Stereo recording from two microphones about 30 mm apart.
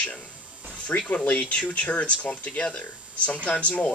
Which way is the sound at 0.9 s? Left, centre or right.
Left.